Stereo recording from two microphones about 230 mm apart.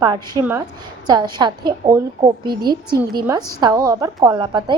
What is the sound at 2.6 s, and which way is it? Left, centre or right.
Speech, right.